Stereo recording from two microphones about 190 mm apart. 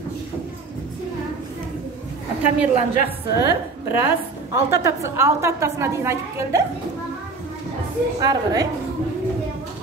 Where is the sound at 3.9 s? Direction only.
10° right (ahead or behind).